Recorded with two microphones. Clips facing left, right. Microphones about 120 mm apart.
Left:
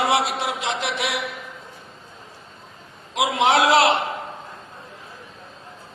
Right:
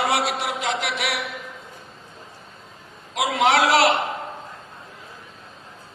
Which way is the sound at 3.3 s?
25° left (ahead or behind).